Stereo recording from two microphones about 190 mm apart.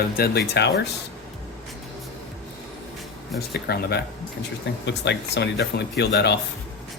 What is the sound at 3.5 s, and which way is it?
Speech, 55° left (ahead or behind).